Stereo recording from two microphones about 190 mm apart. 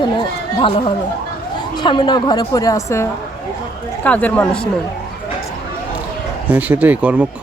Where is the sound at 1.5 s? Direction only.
20° left (ahead or behind); by 4.7 s 5° left (ahead or behind).